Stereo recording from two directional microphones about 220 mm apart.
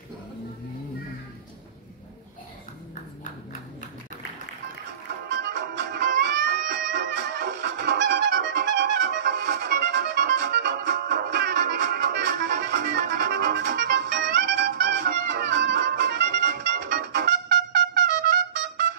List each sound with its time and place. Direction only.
5.4 s music: 50° right (ahead or behind)